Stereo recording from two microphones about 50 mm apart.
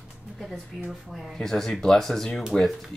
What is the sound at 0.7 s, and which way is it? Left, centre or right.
Speech, centre.